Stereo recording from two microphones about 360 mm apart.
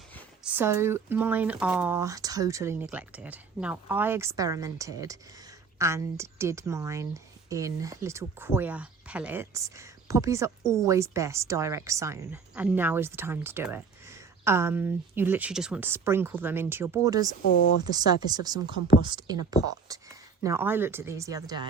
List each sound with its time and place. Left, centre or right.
0.1 s speech: centre
17.4 s speech: left
17.8 s speech: centre